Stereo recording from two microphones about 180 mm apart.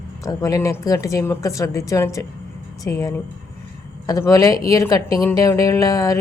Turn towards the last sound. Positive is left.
turn(degrees=20)  # may be behind; listen again after turning